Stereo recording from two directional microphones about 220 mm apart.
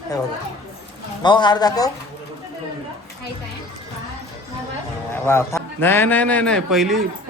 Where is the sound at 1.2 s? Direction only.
20° left (ahead or behind).